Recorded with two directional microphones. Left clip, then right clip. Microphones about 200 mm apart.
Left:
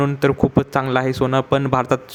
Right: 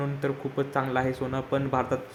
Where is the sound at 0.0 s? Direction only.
40° left (ahead or behind).